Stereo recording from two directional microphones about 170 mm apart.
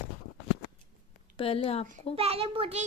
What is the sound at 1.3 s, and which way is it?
Speech, 35° left (ahead or behind).